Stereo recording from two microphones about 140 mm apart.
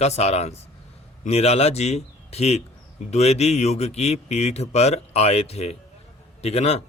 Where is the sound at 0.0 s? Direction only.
50° left (ahead or behind).